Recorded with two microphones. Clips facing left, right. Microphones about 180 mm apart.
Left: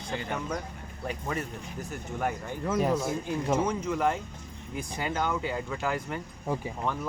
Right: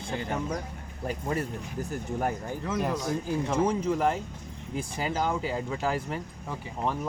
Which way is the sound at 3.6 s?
30° right (ahead or behind).